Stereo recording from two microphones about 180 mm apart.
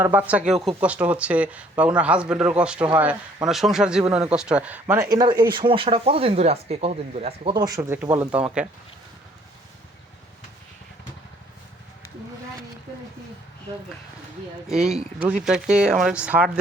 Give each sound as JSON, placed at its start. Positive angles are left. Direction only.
{"t": 0.0, "sound": "speech", "side_deg": -10}
{"t": 5.1, "sound": "speech", "side_deg": -25}
{"t": 14.7, "sound": "speech", "side_deg": 0}